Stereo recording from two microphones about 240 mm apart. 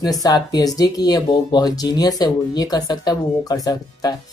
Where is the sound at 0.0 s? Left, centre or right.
Centre.